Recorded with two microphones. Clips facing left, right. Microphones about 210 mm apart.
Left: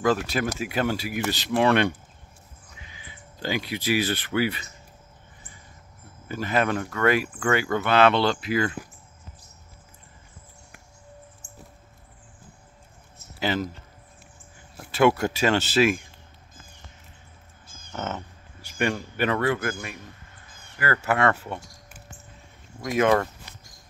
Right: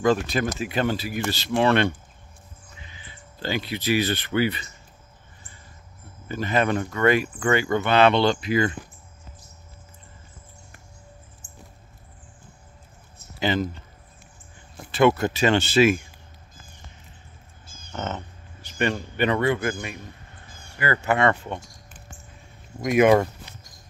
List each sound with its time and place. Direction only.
0.0 s speech: 5° left (ahead or behind)
6.2 s speech: 5° left (ahead or behind)
11.4 s a sound: 45° left (ahead or behind)
13.4 s speech: 5° left (ahead or behind)
14.8 s speech: 5° left (ahead or behind)
17.9 s speech: 10° left (ahead or behind)
22.8 s speech: 15° right (ahead or behind)